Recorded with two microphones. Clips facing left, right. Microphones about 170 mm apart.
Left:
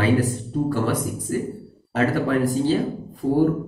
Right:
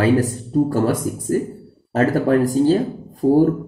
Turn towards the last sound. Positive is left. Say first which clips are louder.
# right 6 dB
turn(degrees=-45)  # may be behind; listen again after turning